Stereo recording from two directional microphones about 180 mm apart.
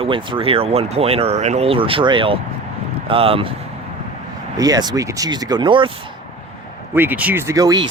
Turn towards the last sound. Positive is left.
turn(degrees=-20)  # may be behind; listen again after turning